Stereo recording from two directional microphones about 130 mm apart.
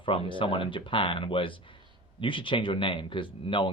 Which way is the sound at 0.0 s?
40° left (ahead or behind).